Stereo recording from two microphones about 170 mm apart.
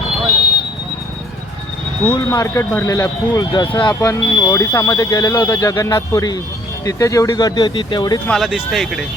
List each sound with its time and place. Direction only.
2.0 s speech: 20° left (ahead or behind)
8.3 s speech: centre (ahead or behind)